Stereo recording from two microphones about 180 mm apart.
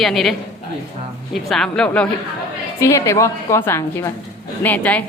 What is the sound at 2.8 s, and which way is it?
A woman's voice, 15° left (ahead or behind).